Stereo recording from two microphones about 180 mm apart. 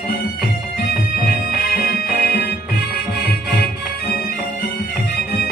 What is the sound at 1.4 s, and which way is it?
Music, 60° left (ahead or behind).